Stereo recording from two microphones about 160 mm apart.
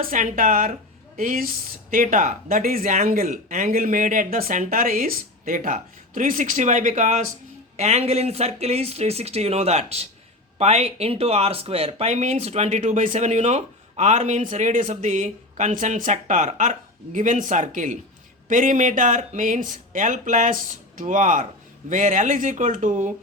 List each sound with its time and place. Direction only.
0.0 s speech: 55° right (ahead or behind)